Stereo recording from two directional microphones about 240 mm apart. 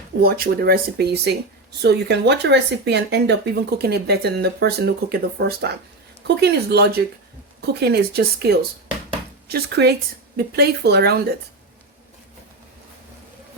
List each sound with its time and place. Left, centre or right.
0.2 s speech: right